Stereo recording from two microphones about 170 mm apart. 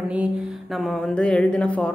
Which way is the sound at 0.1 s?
5° right (ahead or behind).